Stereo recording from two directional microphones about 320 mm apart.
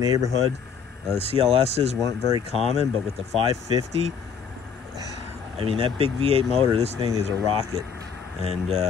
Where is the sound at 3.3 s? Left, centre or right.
Centre.